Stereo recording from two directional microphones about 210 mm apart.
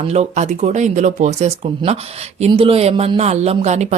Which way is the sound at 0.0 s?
30° right (ahead or behind).